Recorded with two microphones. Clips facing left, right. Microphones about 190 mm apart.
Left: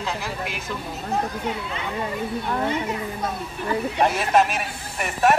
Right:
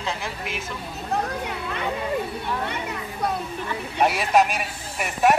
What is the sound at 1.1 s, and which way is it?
Speech, 60° right (ahead or behind).